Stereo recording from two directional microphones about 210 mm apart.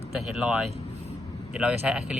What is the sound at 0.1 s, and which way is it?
Speech, 5° right (ahead or behind).